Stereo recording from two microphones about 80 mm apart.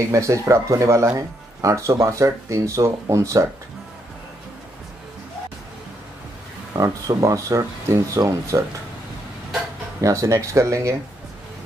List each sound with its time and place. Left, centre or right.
0.1 s speech: right
6.7 s speech: right
10.0 s speech: right